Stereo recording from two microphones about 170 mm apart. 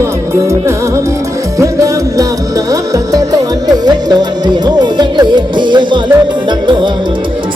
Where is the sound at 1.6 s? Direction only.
20° right (ahead or behind).